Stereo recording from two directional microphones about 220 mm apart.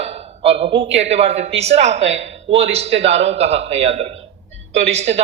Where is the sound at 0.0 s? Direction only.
30° right (ahead or behind).